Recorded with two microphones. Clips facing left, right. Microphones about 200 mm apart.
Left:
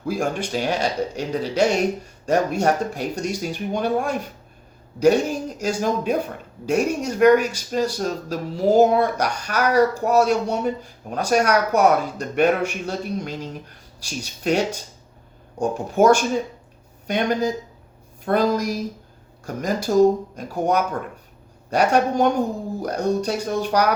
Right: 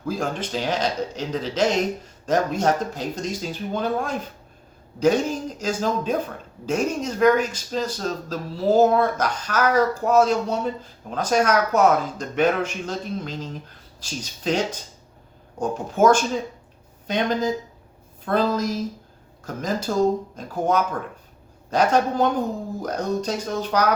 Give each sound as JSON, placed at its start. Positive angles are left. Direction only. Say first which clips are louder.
{"t": 0.1, "sound": "speech", "louder": "left 2 dB", "side_deg": 10}